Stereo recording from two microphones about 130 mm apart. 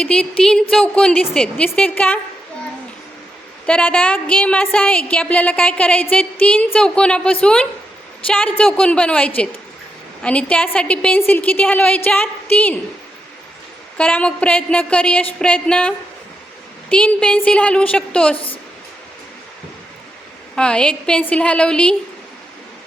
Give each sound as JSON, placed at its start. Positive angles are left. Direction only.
{"t": 0.0, "sound": "a woman's voice", "side_deg": 5}
{"t": 3.7, "sound": "a woman's voice", "side_deg": 10}
{"t": 14.0, "sound": "a woman's voice", "side_deg": 10}
{"t": 18.3, "sound": "a woman's voice", "side_deg": 45}
{"t": 20.6, "sound": "a woman's voice", "side_deg": 5}